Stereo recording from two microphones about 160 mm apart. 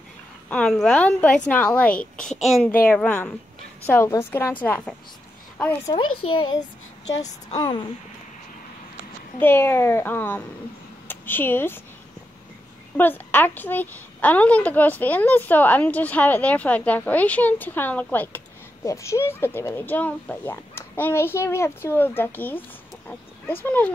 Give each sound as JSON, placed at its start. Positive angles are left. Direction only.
{"t": 0.5, "sound": "a woman's voice", "side_deg": 5}
{"t": 5.9, "sound": "a child's voice", "side_deg": 30}
{"t": 9.4, "sound": "a woman's voice", "side_deg": 15}
{"t": 12.9, "sound": "a woman's voice", "side_deg": 10}